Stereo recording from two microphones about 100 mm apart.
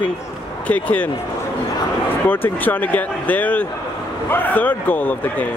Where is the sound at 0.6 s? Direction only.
15° left (ahead or behind).